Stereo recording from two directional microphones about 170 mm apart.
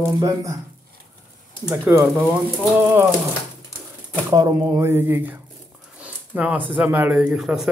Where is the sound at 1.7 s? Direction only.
10° right (ahead or behind).